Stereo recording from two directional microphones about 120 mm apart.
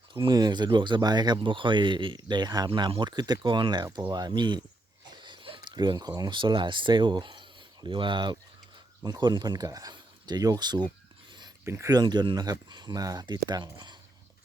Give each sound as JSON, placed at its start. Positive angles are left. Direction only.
{"t": 0.1, "sound": "speech", "side_deg": -40}
{"t": 11.6, "sound": "speech", "side_deg": -25}